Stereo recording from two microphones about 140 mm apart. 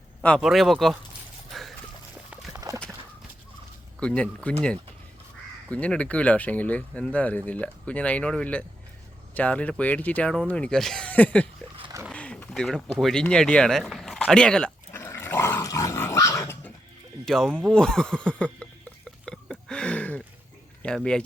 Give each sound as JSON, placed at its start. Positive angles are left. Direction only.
{"t": 0.2, "sound": "speech", "side_deg": 5}
{"t": 1.5, "sound": "a sound", "side_deg": 0}
{"t": 2.5, "sound": "clip-clop", "side_deg": -20}
{"t": 4.0, "sound": "speech", "side_deg": 10}
{"t": 5.6, "sound": "speech", "side_deg": 10}
{"t": 14.9, "sound": "dog", "side_deg": 20}
{"t": 17.2, "sound": "speech", "side_deg": 5}
{"t": 19.2, "sound": "a sound", "side_deg": 5}
{"t": 20.8, "sound": "speech", "side_deg": 5}